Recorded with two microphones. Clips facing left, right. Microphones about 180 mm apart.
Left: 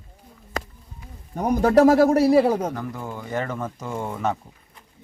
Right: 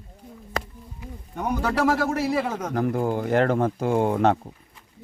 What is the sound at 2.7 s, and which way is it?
Speech, 65° right (ahead or behind).